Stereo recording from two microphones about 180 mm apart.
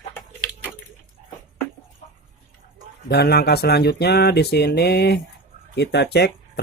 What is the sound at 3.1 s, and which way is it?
Speech, 65° left (ahead or behind).